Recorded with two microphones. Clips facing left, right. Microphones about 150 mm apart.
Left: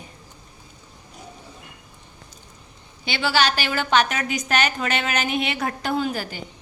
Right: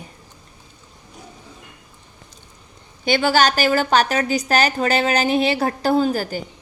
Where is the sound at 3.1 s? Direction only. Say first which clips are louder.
Right 5 dB; 45° right (ahead or behind).